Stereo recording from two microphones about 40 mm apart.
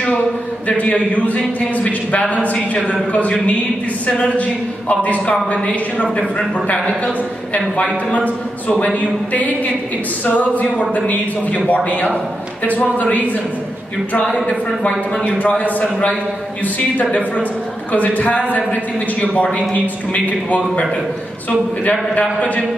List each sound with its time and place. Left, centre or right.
0.7 s a man's voice: left
7.5 s a man's voice: left
14.4 s speech: left
15.2 s a man's voice: left
17.9 s a man's voice: left